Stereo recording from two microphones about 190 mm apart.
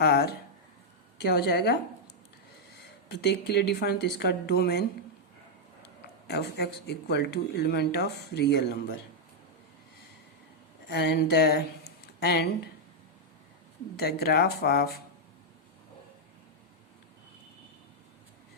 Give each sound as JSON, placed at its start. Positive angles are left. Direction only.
{"t": 0.0, "sound": "speech", "side_deg": 55}
{"t": 3.1, "sound": "speech", "side_deg": 60}
{"t": 6.2, "sound": "speech", "side_deg": 60}
{"t": 10.8, "sound": "speech", "side_deg": 60}
{"t": 13.9, "sound": "speech", "side_deg": 55}